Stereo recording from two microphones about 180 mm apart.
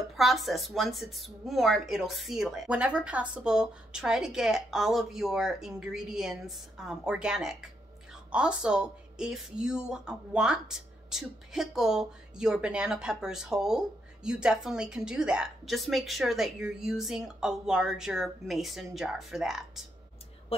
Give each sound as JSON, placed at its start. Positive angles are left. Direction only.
{"t": 0.1, "sound": "speech", "side_deg": 0}